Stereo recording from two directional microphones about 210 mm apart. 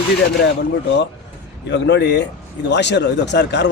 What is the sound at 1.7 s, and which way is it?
Speech, 55° left (ahead or behind).